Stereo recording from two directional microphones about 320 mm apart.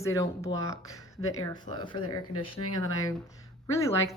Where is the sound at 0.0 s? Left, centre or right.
Centre.